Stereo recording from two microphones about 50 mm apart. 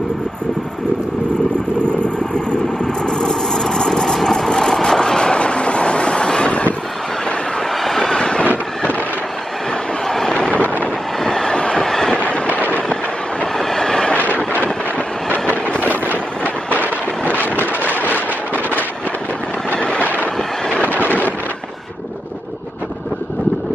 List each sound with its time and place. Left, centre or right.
2.3 s vehicle: centre
7.8 s vehicle: centre
10.0 s vehicle: centre
10.6 s vehicle: left
11.2 s train: centre
12.2 s train: left
13.6 s train: centre
15.2 s train: left
16.4 s a sound: left
17.4 s vehicle: left